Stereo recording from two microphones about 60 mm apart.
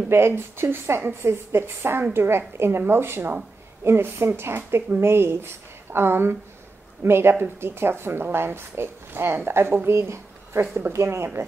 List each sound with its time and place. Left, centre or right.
0.1 s a woman's voice: right
10.9 s speech: right